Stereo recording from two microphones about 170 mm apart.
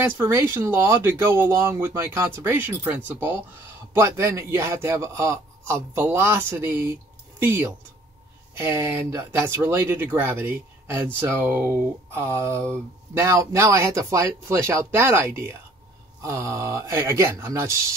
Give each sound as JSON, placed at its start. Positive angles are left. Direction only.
{"t": 0.0, "sound": "speech", "side_deg": -15}
{"t": 8.5, "sound": "speech", "side_deg": -15}